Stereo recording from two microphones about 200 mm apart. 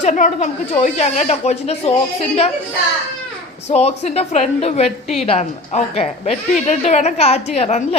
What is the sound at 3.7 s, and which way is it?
A woman's voice, 35° left (ahead or behind).